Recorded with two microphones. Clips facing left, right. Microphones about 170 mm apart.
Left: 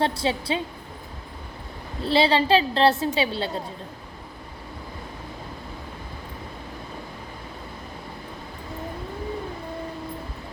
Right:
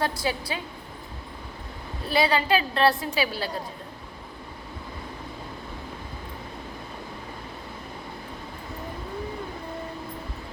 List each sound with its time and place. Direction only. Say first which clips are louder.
0.0 s a woman's voice: left 3 dB; 25° left (ahead or behind)
2.0 s a woman's voice: left 3 dB; 25° left (ahead or behind)